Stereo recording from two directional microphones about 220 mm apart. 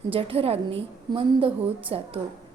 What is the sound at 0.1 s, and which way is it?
A woman's voice, 25° right (ahead or behind).